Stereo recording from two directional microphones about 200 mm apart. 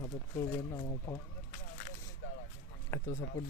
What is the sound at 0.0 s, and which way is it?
Speech, 15° left (ahead or behind).